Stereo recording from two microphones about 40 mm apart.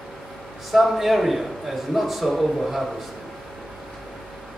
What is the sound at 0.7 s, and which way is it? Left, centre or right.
A man's voice, centre.